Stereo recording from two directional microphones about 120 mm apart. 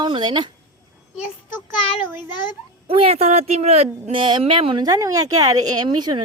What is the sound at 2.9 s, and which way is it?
A woman's voice, 55° right (ahead or behind).